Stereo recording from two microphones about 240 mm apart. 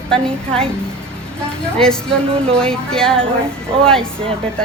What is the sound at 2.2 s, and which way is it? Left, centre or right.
Speech, right.